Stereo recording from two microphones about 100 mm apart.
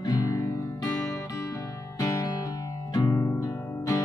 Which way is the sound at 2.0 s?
45° left (ahead or behind).